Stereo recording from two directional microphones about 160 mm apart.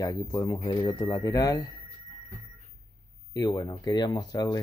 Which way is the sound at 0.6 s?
35° left (ahead or behind).